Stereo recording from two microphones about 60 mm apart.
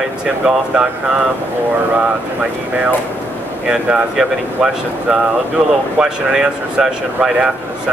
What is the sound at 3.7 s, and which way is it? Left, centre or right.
Speech, centre.